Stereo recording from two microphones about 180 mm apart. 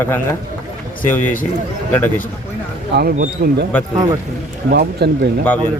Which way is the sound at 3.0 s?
50° right (ahead or behind).